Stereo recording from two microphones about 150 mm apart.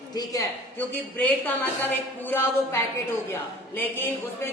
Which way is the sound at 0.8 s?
10° left (ahead or behind).